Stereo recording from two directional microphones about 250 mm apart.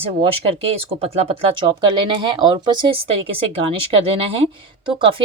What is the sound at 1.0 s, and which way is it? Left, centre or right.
Speech, right.